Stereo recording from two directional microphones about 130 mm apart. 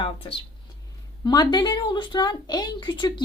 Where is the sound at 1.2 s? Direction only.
30° left (ahead or behind).